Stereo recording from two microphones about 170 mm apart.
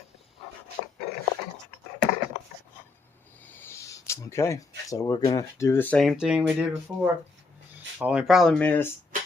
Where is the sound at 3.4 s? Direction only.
10° left (ahead or behind).